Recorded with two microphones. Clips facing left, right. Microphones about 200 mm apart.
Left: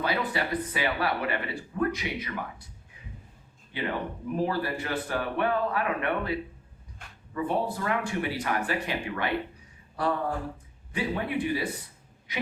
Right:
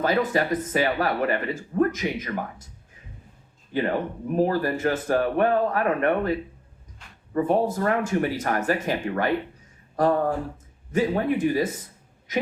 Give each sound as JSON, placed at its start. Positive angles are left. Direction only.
{"t": 0.0, "sound": "speech", "side_deg": -45}
{"t": 3.7, "sound": "a woman's voice", "side_deg": -45}